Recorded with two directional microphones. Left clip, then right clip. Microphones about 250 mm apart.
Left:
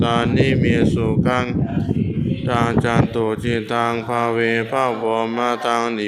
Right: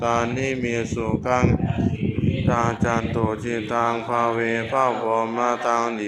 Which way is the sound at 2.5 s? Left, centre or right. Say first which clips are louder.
Left 3 dB; left.